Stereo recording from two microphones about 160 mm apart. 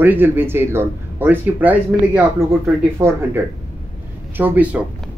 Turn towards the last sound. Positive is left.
turn(degrees=-10)  # may be behind; listen again after turning